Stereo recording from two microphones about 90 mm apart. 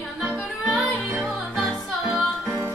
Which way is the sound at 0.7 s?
Centre (ahead or behind).